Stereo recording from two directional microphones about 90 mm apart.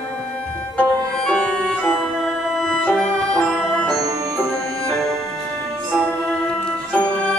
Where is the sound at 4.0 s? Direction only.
40° right (ahead or behind).